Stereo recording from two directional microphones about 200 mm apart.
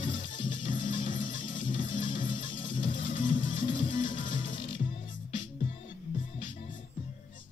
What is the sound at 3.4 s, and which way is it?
Music, 25° left (ahead or behind).